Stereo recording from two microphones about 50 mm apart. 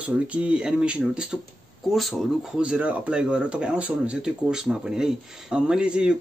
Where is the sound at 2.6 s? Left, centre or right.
Right.